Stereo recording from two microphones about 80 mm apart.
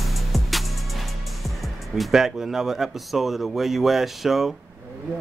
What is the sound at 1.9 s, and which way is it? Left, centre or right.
Speech, centre.